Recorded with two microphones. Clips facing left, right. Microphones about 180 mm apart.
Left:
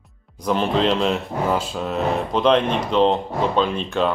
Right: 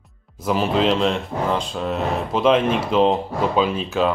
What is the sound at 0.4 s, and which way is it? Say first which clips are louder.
Speech: even; 5° right (ahead or behind).